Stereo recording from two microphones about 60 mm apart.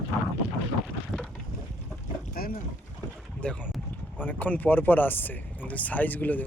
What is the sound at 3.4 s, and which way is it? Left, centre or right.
Speech, centre.